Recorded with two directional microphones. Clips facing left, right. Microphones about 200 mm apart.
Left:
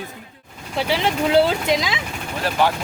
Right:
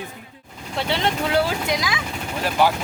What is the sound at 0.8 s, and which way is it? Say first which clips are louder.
Speech: left 2 dB; 5° left (ahead or behind).